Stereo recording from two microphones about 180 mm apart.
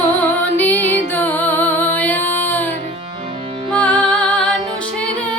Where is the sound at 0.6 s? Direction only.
10° left (ahead or behind).